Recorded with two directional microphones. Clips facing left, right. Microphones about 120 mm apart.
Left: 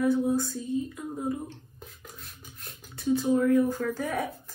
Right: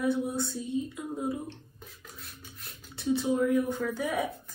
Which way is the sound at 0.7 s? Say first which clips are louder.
Even; 20° right (ahead or behind).